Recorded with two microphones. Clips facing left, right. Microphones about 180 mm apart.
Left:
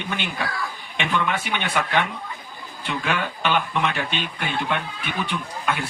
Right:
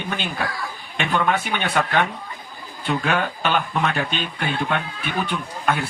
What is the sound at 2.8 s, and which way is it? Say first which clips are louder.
Speech: right 4 dB; 40° right (ahead or behind).